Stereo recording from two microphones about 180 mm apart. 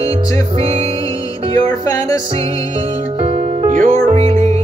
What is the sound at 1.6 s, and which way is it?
Music, 20° left (ahead or behind).